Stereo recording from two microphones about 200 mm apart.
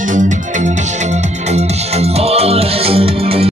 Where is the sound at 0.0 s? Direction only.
40° right (ahead or behind).